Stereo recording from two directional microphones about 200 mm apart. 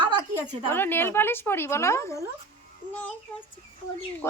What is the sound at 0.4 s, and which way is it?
Speech, 10° left (ahead or behind).